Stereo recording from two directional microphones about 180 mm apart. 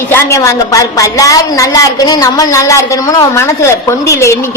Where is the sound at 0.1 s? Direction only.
15° left (ahead or behind).